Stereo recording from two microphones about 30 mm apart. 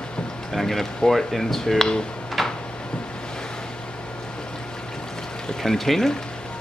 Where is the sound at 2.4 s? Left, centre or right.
Centre.